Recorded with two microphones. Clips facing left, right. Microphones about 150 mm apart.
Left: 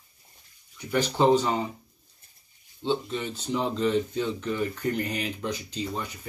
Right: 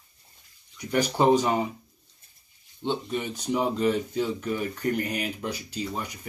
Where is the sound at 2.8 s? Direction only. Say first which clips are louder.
Left 1 dB; 15° right (ahead or behind).